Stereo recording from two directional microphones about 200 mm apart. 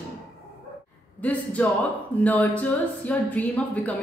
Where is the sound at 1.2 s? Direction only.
5° left (ahead or behind).